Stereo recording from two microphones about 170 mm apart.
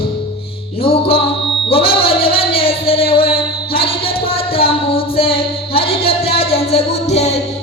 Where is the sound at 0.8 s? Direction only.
35° left (ahead or behind).